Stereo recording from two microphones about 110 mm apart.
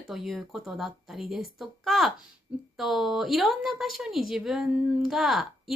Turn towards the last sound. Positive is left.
turn(degrees=0)  # may be behind; listen again after turning